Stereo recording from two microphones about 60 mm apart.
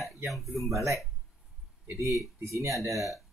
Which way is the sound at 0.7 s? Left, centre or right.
Right.